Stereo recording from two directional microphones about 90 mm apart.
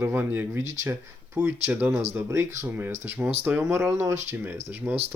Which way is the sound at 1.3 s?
15° right (ahead or behind).